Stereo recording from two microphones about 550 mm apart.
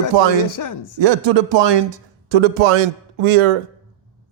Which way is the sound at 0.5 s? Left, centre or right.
Left.